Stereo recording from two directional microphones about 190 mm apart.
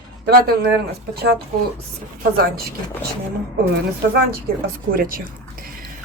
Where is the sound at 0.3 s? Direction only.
55° right (ahead or behind).